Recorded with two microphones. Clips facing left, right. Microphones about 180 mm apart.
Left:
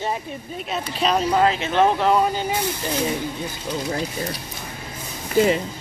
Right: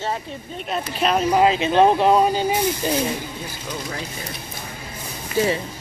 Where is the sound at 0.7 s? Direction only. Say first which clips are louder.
Right 1 dB; centre (ahead or behind).